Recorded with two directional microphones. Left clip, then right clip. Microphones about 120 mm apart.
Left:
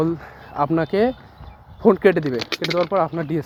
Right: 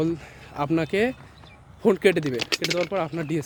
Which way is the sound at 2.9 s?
5° right (ahead or behind).